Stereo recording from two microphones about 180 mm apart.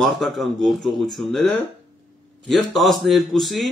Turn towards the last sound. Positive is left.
turn(degrees=0)  # may be behind; listen again after turning